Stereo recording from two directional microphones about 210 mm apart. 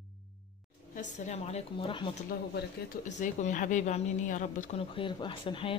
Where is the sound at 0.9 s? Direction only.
35° left (ahead or behind).